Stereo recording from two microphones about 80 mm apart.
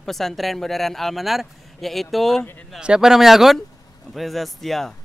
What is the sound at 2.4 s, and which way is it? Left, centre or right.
Speech, left.